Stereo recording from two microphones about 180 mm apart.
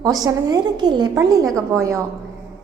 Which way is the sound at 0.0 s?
20° right (ahead or behind).